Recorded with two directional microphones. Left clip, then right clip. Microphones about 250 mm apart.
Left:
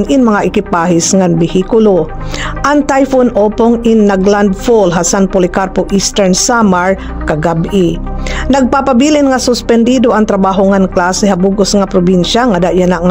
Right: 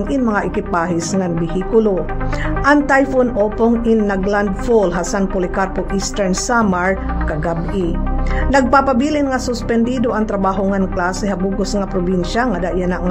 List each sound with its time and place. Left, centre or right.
0.1 s speech: left